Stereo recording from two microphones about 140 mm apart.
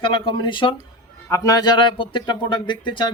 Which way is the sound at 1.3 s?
25° left (ahead or behind).